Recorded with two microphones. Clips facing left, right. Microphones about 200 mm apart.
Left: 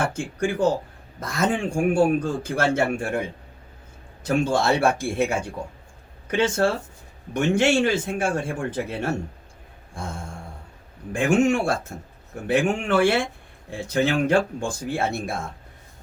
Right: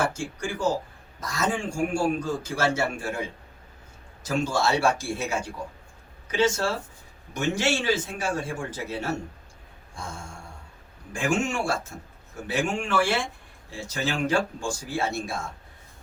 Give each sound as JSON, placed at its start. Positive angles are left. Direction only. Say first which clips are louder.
{"t": 0.1, "sound": "a man's voice", "louder": "left 6 dB", "side_deg": 55}
{"t": 9.9, "sound": "a sound", "louder": "left 4 dB", "side_deg": 55}
{"t": 11.1, "sound": "a man's voice", "louder": "left 7 dB", "side_deg": 60}